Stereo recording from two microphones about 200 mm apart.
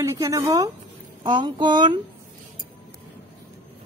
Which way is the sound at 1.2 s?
25° right (ahead or behind).